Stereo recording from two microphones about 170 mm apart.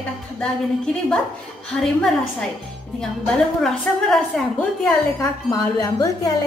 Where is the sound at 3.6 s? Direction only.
5° left (ahead or behind).